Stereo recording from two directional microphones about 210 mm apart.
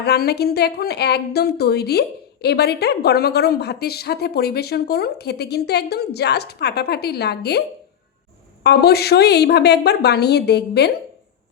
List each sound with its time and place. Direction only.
0.0 s a woman's voice: 50° left (ahead or behind)
8.6 s a woman's voice: 50° left (ahead or behind)